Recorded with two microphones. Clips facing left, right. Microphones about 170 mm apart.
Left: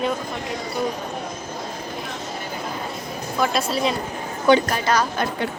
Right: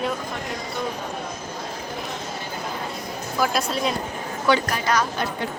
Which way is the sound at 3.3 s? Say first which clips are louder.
Left 1 dB; centre (ahead or behind).